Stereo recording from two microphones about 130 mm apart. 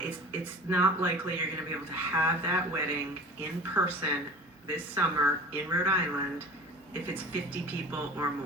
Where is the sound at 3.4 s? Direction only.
15° right (ahead or behind).